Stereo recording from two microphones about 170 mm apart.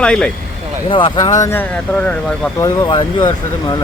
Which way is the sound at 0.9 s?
30° left (ahead or behind).